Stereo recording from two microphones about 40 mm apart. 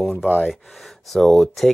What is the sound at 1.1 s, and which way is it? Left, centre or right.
Speech, centre.